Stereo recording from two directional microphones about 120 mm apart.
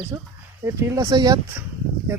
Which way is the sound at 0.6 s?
25° right (ahead or behind).